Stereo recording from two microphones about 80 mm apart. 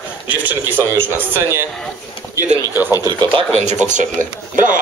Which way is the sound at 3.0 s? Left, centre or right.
Right.